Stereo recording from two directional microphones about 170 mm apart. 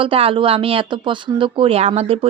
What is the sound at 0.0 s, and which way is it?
Speech, 35° right (ahead or behind).